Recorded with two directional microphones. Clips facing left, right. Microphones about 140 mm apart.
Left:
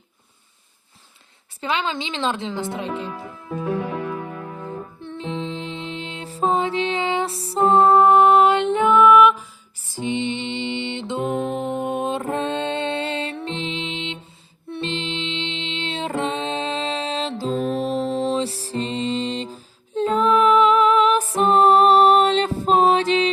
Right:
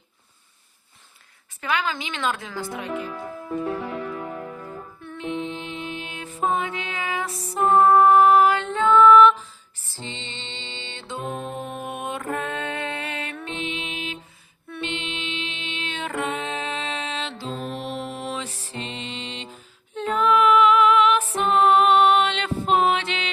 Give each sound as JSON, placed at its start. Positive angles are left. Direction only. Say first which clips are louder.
{"t": 1.6, "sound": "a woman's voice", "louder": "left 2 dB", "side_deg": 25}
{"t": 4.6, "sound": "music", "louder": "left 5 dB", "side_deg": 30}
{"t": 11.3, "sound": "music", "louder": "left 7 dB", "side_deg": 90}
{"t": 11.7, "sound": "music", "louder": "left 7 dB", "side_deg": 25}